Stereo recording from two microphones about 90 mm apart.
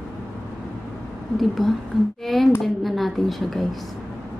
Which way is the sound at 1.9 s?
Centre (ahead or behind).